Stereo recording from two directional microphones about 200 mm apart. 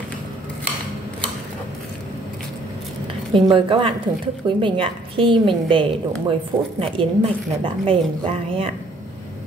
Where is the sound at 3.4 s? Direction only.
25° right (ahead or behind).